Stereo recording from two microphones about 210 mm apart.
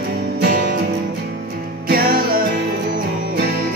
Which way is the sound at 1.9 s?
45° right (ahead or behind).